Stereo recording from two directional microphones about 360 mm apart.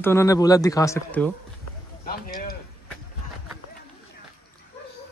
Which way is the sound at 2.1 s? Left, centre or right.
Left.